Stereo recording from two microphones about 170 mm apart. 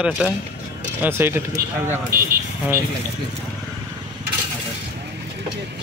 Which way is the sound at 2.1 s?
55° right (ahead or behind).